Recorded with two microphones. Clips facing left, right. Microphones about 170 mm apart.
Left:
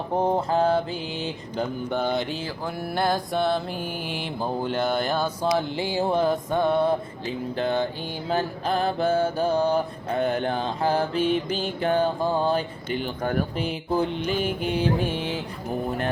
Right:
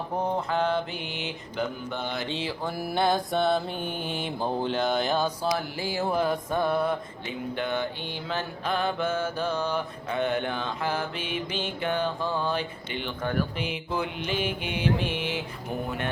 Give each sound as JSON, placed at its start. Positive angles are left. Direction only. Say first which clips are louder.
{"t": 0.2, "sound": "mantra", "louder": "left 5 dB", "side_deg": 30}
{"t": 1.9, "sound": "mantra", "louder": "left 7 dB", "side_deg": 50}
{"t": 2.9, "sound": "mantra", "louder": "even", "side_deg": 0}
{"t": 5.5, "sound": "mantra", "louder": "left 5 dB", "side_deg": 20}